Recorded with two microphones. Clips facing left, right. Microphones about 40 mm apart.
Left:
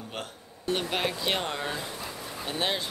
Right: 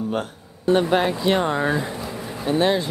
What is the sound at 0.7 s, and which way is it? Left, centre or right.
Speech, centre.